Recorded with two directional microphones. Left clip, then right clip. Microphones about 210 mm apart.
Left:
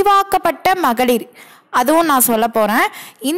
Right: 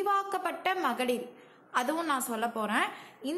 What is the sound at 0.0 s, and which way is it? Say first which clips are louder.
A woman's voice: left 17 dB; 50° left (ahead or behind).